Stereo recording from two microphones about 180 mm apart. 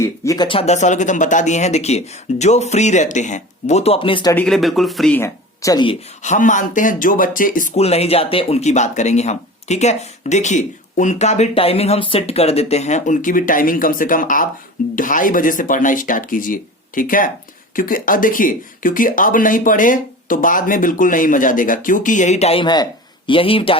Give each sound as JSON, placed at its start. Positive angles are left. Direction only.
{"t": 0.0, "sound": "speech", "side_deg": 15}
{"t": 0.4, "sound": "speech", "side_deg": 35}
{"t": 4.4, "sound": "speech", "side_deg": 0}
{"t": 5.2, "sound": "speech", "side_deg": 20}
{"t": 6.2, "sound": "speech", "side_deg": 45}